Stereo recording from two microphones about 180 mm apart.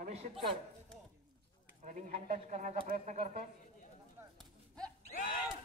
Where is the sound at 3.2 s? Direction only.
50° right (ahead or behind).